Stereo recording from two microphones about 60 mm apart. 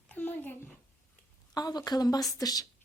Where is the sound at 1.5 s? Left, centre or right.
Left.